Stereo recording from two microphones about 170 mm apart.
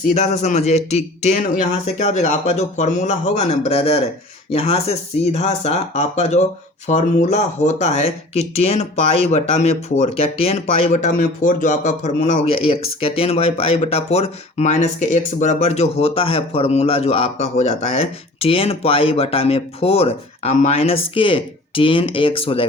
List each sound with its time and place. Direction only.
0.1 s speech: 40° left (ahead or behind)